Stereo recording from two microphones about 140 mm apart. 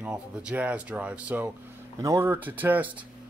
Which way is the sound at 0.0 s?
10° right (ahead or behind).